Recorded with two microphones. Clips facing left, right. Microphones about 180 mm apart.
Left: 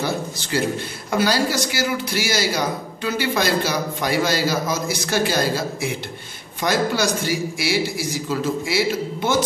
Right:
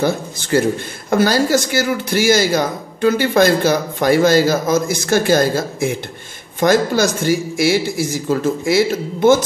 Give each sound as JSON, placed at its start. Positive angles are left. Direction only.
{"t": 0.0, "sound": "speech", "side_deg": -50}